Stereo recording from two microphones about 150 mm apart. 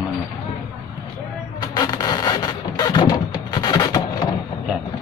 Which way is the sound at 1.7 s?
25° left (ahead or behind).